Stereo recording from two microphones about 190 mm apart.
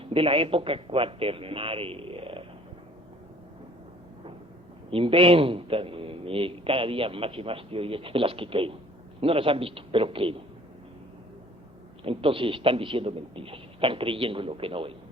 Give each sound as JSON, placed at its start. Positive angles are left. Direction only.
{"t": 0.0, "sound": "a man's voice", "side_deg": -30}
{"t": 4.9, "sound": "a man's voice", "side_deg": -30}
{"t": 12.0, "sound": "a man's voice", "side_deg": -30}